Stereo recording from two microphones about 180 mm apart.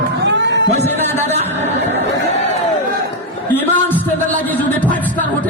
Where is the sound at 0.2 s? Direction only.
80° right.